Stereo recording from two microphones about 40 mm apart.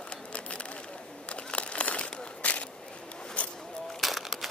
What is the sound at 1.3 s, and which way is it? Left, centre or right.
Crumpling, left.